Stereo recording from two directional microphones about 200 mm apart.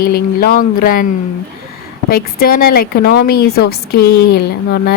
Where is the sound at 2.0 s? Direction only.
45° left (ahead or behind).